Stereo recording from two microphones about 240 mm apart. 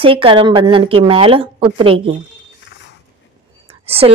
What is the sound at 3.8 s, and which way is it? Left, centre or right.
Speech, right.